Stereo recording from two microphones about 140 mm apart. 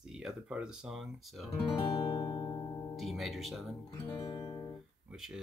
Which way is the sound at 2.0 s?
30° left (ahead or behind).